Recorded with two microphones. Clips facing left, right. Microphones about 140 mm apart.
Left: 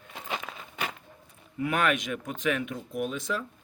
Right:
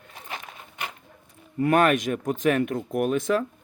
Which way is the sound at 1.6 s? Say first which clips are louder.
Right 7 dB; 45° right (ahead or behind).